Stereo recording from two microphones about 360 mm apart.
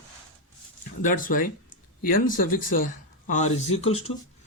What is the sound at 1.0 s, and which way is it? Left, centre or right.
Speech, left.